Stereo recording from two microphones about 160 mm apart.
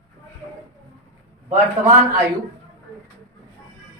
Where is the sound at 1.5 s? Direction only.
50° right (ahead or behind).